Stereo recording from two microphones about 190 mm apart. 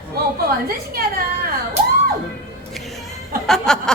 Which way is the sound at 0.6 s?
50° right (ahead or behind).